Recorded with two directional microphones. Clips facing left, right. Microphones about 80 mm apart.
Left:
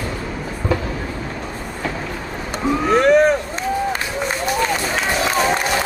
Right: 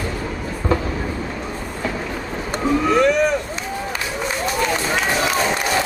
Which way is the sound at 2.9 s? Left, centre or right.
Left.